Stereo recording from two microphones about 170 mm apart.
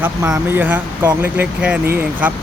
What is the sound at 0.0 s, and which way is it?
Speech, 10° right (ahead or behind).